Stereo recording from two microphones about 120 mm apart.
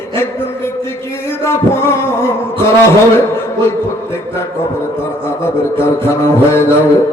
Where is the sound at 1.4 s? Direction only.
20° left (ahead or behind).